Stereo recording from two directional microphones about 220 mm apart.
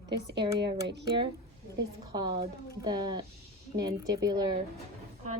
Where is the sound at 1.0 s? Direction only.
20° right (ahead or behind).